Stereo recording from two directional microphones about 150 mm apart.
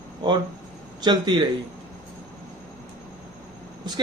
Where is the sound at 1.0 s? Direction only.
30° right (ahead or behind).